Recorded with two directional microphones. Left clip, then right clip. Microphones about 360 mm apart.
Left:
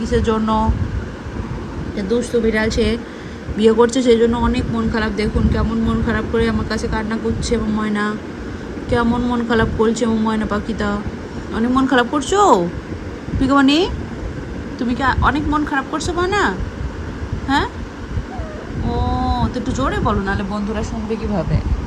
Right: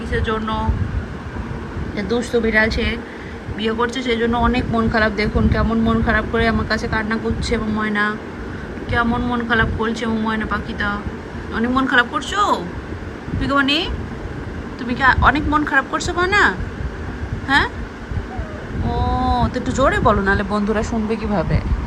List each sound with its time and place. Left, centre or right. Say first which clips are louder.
0.2 s speech: left 3 dB; centre
2.0 s speech: left 1 dB; centre
18.9 s speech: right 2 dB; centre